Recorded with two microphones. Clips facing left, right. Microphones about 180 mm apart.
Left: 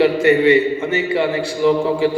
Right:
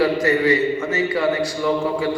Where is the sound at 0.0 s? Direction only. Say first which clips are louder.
Left 5 dB; 25° left (ahead or behind).